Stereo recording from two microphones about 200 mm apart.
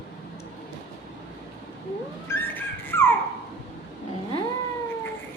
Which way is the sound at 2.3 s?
10° left (ahead or behind).